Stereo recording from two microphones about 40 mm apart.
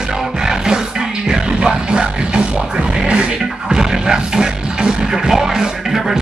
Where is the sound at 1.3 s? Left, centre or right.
Right.